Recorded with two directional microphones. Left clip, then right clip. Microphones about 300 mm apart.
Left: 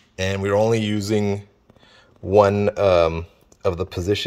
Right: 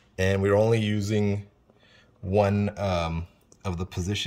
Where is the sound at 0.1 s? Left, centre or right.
Centre.